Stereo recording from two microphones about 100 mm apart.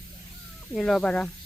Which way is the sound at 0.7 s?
5° left (ahead or behind).